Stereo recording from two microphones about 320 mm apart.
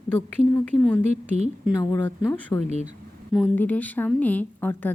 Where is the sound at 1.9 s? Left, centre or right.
Centre.